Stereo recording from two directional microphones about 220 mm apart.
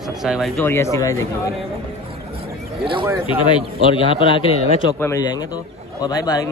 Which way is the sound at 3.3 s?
25° left (ahead or behind).